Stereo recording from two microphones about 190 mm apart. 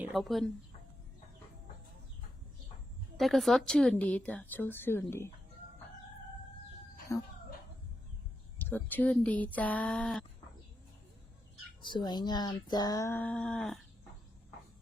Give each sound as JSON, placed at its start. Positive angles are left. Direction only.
{"t": 0.1, "sound": "speech", "side_deg": 0}
{"t": 3.2, "sound": "speech", "side_deg": 0}
{"t": 7.1, "sound": "speech", "side_deg": 15}
{"t": 8.5, "sound": "speech", "side_deg": 10}
{"t": 11.8, "sound": "speech", "side_deg": 25}